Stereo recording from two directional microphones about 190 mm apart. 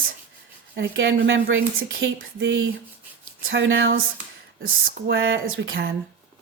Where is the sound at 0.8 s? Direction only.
70° right (ahead or behind).